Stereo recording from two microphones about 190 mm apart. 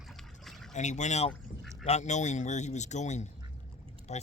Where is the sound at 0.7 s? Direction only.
40° left (ahead or behind).